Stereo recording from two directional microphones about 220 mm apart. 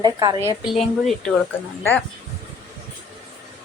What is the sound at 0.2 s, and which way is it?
Speech, 20° right (ahead or behind).